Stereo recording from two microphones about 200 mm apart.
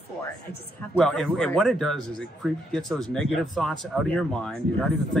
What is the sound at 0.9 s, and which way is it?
Speech, centre (ahead or behind).